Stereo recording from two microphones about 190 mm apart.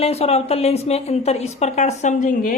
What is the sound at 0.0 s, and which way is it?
A woman's voice, 35° left (ahead or behind).